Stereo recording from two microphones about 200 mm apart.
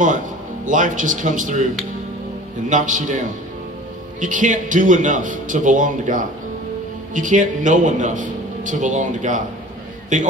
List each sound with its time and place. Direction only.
0.7 s a man's voice: 40° right (ahead or behind)
2.7 s a man's voice: 40° right (ahead or behind)
4.2 s a man's voice: 40° right (ahead or behind)